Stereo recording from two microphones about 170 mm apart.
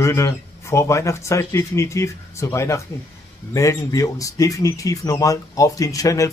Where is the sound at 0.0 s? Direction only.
15° left (ahead or behind).